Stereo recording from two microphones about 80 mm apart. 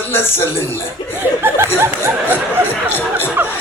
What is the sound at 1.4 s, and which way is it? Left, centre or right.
Speech, right.